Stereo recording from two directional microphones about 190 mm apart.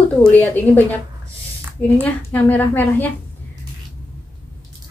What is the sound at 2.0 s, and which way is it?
A woman's voice, 10° left (ahead or behind).